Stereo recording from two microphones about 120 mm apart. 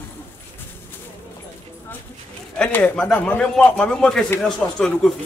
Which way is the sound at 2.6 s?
15° left (ahead or behind).